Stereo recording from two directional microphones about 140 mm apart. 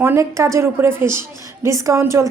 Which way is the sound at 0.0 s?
20° right (ahead or behind).